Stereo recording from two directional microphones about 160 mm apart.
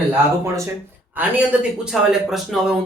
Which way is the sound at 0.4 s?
20° right (ahead or behind).